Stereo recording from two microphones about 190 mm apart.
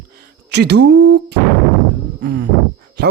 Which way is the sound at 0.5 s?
60° right (ahead or behind).